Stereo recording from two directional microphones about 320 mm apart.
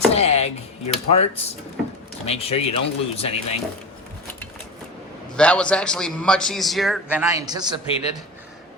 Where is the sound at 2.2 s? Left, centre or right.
Centre.